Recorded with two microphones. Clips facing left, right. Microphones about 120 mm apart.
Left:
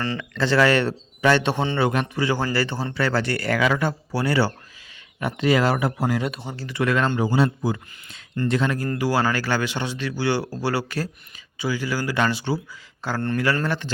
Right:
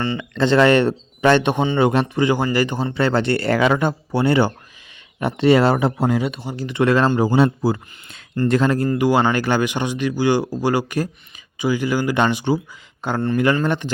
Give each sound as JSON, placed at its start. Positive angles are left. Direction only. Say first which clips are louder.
{"t": 0.2, "sound": "speech", "louder": "right 4 dB", "side_deg": -25}
{"t": 6.2, "sound": "speech", "louder": "right 3 dB", "side_deg": -5}
{"t": 6.6, "sound": "speech", "louder": "right 6 dB", "side_deg": -20}
{"t": 7.3, "sound": "a man's voice", "louder": "right 5 dB", "side_deg": -60}
{"t": 8.4, "sound": "speech", "louder": "right 5 dB", "side_deg": -45}
{"t": 8.9, "sound": "speech", "louder": "right 4 dB", "side_deg": -20}